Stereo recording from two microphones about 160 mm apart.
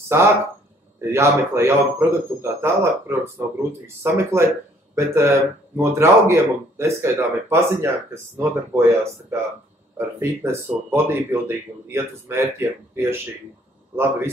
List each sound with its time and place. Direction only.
0.1 s speech: 15° right (ahead or behind)